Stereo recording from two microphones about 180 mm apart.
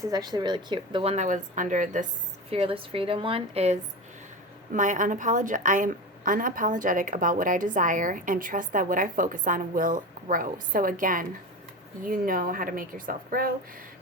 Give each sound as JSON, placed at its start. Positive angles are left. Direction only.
{"t": 0.0, "sound": "a woman's voice", "side_deg": -20}
{"t": 1.1, "sound": "a woman's voice", "side_deg": -45}
{"t": 2.5, "sound": "a woman's voice", "side_deg": -30}